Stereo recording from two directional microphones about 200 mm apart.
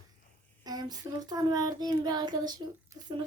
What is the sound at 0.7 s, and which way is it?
Child singing, 20° right (ahead or behind).